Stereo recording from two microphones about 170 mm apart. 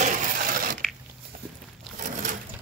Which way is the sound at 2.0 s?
45° right (ahead or behind).